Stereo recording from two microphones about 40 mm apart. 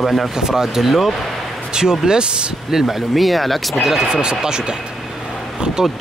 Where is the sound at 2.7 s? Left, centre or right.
Centre.